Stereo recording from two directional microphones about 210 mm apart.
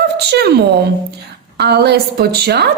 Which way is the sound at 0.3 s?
50° right (ahead or behind).